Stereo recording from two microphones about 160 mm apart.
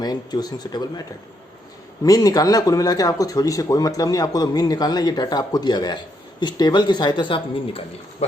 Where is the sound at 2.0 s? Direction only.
20° left (ahead or behind).